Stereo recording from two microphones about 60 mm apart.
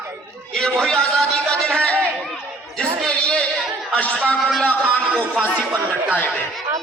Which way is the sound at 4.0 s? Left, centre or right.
Left.